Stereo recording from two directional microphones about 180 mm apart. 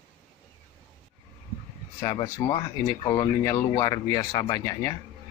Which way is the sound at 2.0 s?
20° left (ahead or behind).